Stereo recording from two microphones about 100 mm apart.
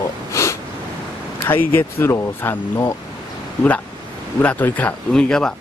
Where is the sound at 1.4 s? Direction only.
20° left (ahead or behind).